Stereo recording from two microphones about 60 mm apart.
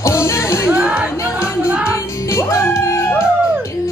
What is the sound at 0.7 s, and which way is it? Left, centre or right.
Music, centre.